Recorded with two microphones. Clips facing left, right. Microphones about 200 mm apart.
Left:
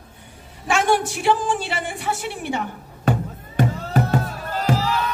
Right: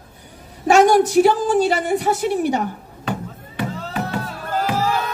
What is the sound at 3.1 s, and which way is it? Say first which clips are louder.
Music: left 4 dB; 45° left (ahead or behind).